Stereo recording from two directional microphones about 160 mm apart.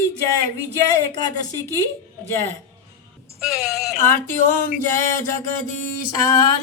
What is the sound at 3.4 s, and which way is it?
Speech, centre (ahead or behind).